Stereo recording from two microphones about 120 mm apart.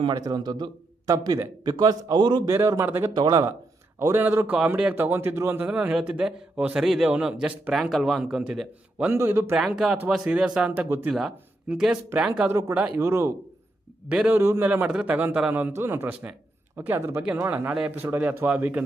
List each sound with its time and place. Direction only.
0.1 s a man's voice: 35° right (ahead or behind)
2.5 s speech: 20° right (ahead or behind)
3.2 s a man's voice: 35° right (ahead or behind)
4.0 s a man's voice: 20° right (ahead or behind)
9.6 s a man's voice: centre (ahead or behind)
10.8 s speech: 20° right (ahead or behind)
11.1 s speech: 5° right (ahead or behind)
12.5 s speech: 25° right (ahead or behind)
14.1 s a man's voice: 10° right (ahead or behind)